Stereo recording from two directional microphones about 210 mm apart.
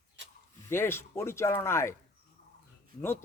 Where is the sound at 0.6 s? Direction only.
10° left (ahead or behind).